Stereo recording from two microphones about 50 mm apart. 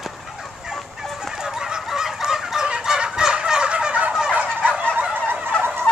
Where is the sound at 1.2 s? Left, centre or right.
Centre.